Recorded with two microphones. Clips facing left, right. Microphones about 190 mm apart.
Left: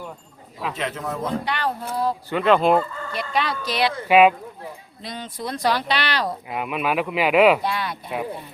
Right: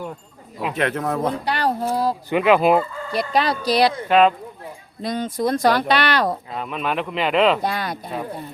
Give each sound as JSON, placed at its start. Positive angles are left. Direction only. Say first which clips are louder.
{"t": 0.7, "sound": "speech", "louder": "right 6 dB", "side_deg": -60}
{"t": 1.5, "sound": "speech", "louder": "right 5 dB", "side_deg": -40}
{"t": 2.3, "sound": "fowl", "louder": "right 2 dB", "side_deg": -10}
{"t": 3.1, "sound": "speech", "louder": "right 8 dB", "side_deg": -35}
{"t": 4.1, "sound": "speech", "louder": "left 2 dB", "side_deg": 10}
{"t": 5.0, "sound": "speech", "louder": "right 9 dB", "side_deg": -45}
{"t": 6.5, "sound": "speech", "louder": "left 1 dB", "side_deg": 10}
{"t": 7.6, "sound": "speech", "louder": "right 2 dB", "side_deg": -45}